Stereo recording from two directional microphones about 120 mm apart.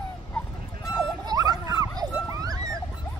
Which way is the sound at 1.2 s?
30° right (ahead or behind).